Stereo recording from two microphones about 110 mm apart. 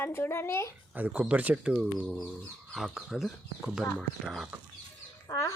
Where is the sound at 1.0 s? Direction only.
15° right (ahead or behind).